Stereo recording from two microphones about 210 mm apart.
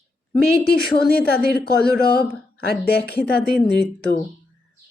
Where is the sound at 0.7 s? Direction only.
50° left (ahead or behind).